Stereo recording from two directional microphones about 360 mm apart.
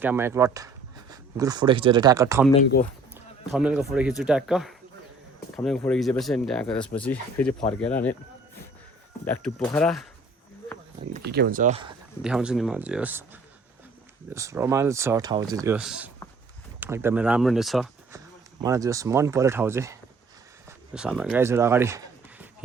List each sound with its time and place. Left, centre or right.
0.0 s speech: centre
3.5 s speech: centre
9.2 s speech: centre
11.1 s speech: right
12.2 s speech: centre